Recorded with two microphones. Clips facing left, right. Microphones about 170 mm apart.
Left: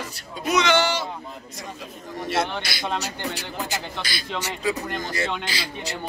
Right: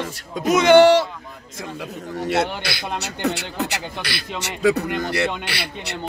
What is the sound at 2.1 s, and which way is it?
A man's voice, 70° right (ahead or behind).